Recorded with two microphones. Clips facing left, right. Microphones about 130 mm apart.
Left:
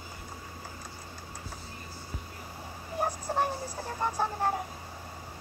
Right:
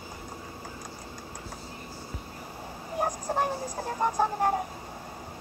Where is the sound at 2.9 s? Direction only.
15° right (ahead or behind).